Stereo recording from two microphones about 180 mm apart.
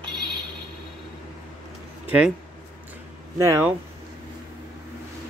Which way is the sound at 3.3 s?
15° right (ahead or behind).